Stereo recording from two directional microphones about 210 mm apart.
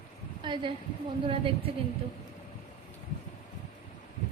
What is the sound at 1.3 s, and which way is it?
Speech, 25° right (ahead or behind).